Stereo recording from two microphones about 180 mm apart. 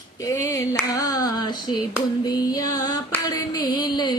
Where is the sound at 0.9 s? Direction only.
20° left (ahead or behind).